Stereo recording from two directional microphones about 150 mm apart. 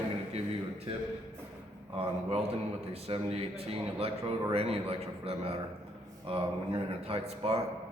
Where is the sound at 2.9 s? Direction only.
40° right (ahead or behind).